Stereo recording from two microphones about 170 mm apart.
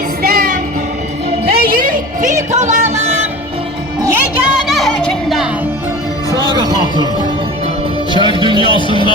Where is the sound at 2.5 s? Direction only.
40° right (ahead or behind).